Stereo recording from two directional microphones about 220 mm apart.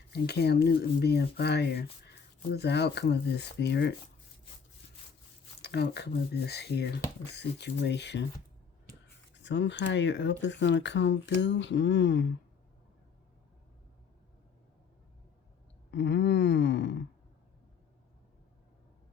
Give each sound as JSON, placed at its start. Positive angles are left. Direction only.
{"t": 0.1, "sound": "speech", "side_deg": 50}
{"t": 5.6, "sound": "speech", "side_deg": 50}
{"t": 9.4, "sound": "speech", "side_deg": 55}
{"t": 15.9, "sound": "speech", "side_deg": 50}